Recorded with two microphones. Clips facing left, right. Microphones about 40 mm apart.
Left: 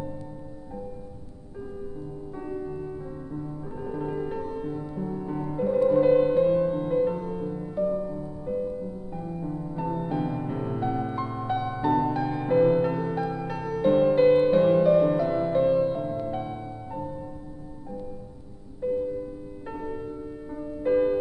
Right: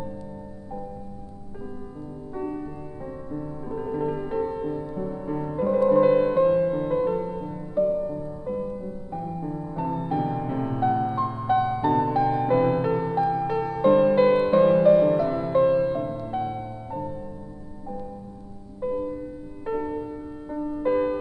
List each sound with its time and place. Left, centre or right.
2.3 s music: centre
18.8 s music: centre